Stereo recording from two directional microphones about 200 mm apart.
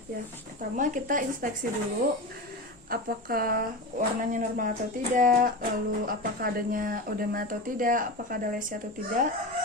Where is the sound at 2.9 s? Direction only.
45° right (ahead or behind).